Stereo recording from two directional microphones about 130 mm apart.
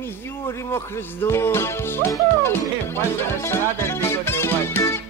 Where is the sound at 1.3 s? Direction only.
20° left (ahead or behind).